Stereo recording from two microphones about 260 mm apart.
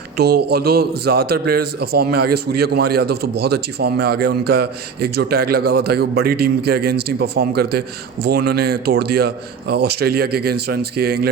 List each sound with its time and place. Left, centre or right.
0.2 s a man's voice: right